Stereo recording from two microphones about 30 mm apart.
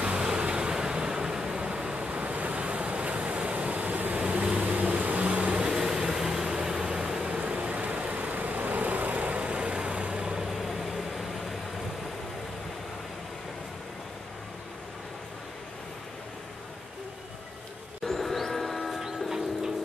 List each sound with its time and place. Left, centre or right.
0.4 s vehicle: right
2.0 s waves: right
3.7 s a sound: right
4.5 s vehicle: right
5.7 s vehicle: centre
7.3 s vehicle: right
7.7 s vehicle: right
9.1 s vehicle: right
10.2 s vehicle: centre
10.6 s vehicle: centre
18.0 s train: centre
19.2 s bird: centre